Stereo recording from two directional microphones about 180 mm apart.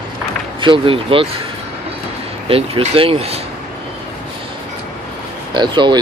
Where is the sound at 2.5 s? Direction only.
30° right (ahead or behind).